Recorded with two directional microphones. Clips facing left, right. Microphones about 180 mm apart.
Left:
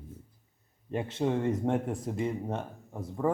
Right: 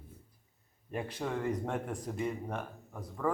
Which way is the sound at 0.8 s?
25° left (ahead or behind).